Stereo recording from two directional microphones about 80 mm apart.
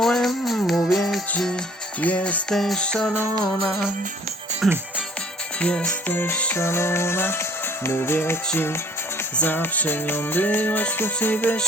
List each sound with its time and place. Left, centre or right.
0.0 s music: centre
2.0 s music: centre
4.6 s speech: centre
5.5 s music: centre
6.1 s music: left
9.4 s music: left